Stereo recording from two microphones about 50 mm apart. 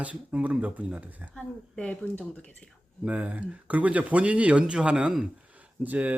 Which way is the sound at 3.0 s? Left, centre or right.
Right.